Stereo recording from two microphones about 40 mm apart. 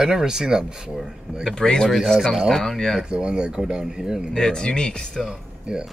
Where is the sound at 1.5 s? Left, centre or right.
Centre.